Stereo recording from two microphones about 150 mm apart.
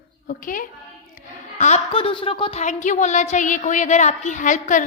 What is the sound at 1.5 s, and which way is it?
A woman's voice, 45° left (ahead or behind).